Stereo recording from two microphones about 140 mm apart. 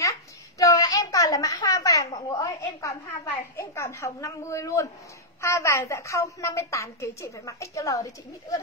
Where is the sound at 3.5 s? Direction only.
20° left (ahead or behind).